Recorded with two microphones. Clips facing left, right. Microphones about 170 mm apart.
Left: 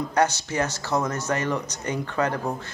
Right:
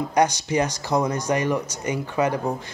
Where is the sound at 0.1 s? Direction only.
15° right (ahead or behind).